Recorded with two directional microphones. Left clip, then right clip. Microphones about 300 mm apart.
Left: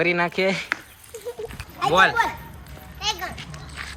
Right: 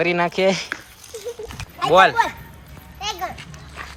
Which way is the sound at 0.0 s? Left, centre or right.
Centre.